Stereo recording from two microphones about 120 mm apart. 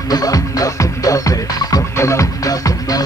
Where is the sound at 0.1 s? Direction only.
30° left (ahead or behind).